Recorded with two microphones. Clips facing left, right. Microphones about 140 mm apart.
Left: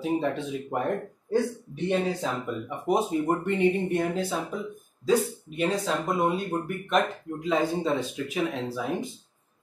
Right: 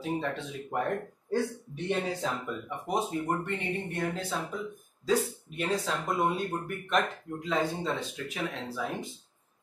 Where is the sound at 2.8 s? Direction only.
10° left (ahead or behind).